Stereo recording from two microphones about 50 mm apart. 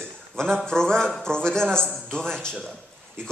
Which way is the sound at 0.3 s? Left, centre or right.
Centre.